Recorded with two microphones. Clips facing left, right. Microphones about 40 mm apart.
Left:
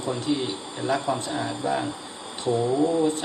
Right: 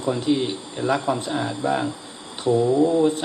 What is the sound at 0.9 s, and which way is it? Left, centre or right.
Speech, centre.